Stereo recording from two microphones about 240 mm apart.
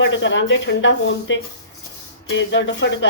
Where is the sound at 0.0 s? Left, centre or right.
Left.